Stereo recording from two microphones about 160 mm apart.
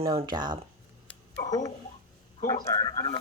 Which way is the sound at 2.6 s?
20° left (ahead or behind).